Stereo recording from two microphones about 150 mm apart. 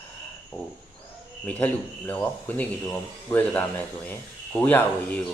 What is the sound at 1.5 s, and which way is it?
A man's voice, 10° left (ahead or behind).